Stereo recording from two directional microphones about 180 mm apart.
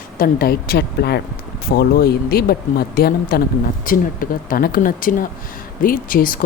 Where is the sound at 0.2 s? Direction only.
55° left (ahead or behind).